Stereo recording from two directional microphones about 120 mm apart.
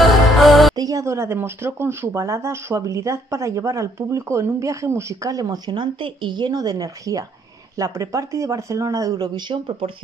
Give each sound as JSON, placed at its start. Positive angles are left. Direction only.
{"t": 0.0, "sound": "music", "side_deg": 0}
{"t": 0.7, "sound": "speech", "side_deg": -30}